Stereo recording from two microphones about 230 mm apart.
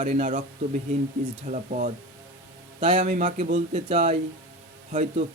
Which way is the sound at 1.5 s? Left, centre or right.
Right.